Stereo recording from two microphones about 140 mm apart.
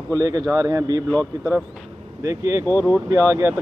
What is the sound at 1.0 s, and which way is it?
Speech, 10° left (ahead or behind).